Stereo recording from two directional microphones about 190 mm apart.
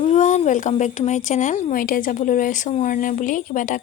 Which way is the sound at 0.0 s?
40° left (ahead or behind).